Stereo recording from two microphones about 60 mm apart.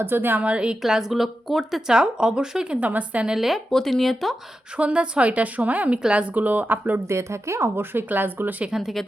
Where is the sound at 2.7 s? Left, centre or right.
Right.